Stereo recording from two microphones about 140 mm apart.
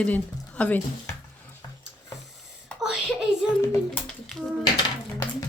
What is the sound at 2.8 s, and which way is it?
Speech, 5° right (ahead or behind).